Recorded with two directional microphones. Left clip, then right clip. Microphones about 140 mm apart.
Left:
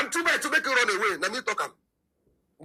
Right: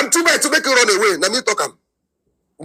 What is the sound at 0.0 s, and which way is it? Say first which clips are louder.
A man's voice: right 10 dB; 40° right (ahead or behind).